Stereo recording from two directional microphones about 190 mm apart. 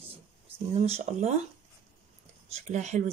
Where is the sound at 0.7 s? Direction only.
35° right (ahead or behind).